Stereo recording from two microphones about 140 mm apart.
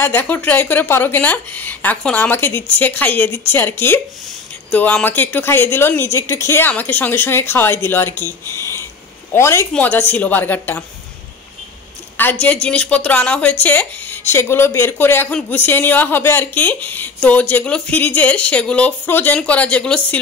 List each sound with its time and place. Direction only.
0.0 s a woman's voice: 15° left (ahead or behind)
12.2 s a woman's voice: 10° left (ahead or behind)